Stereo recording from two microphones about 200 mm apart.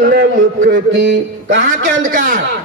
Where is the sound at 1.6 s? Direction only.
40° right (ahead or behind).